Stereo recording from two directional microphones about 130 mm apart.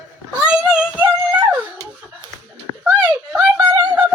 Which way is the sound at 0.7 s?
10° right (ahead or behind).